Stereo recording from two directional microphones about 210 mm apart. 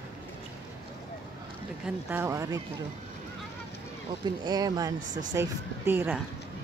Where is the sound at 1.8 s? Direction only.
10° right (ahead or behind).